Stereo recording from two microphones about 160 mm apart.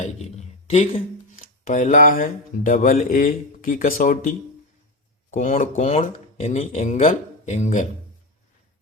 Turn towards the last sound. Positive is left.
turn(degrees=45)  # may be behind; listen again after turning